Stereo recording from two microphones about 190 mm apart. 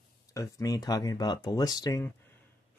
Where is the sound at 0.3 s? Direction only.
15° left (ahead or behind).